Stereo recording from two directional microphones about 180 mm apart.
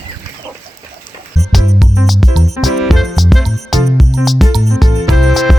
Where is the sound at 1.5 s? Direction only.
Centre (ahead or behind).